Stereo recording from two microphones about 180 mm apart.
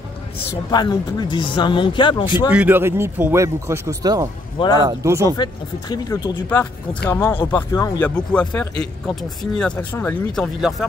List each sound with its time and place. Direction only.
0.7 s speech: 25° left (ahead or behind)
2.5 s speech: 10° right (ahead or behind)
5.4 s speech: 20° left (ahead or behind)
8.0 s speech: 10° left (ahead or behind)